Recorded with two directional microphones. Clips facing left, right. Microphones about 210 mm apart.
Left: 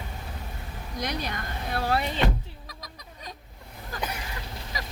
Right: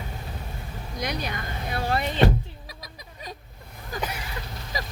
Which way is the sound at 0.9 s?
Centre (ahead or behind).